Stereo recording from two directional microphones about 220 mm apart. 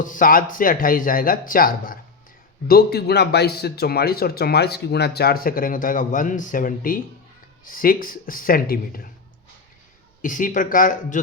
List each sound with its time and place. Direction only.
0.0 s speech: 35° left (ahead or behind)
10.2 s speech: 35° left (ahead or behind)